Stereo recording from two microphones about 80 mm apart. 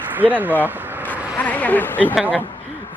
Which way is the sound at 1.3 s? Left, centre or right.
Centre.